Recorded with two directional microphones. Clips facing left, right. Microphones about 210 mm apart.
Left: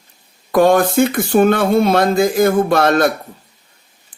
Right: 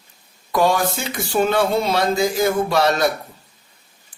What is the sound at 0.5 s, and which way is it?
Speech, 55° left (ahead or behind).